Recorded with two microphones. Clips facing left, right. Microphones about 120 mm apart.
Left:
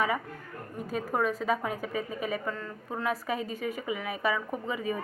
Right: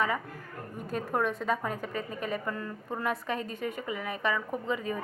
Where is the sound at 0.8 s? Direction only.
Centre (ahead or behind).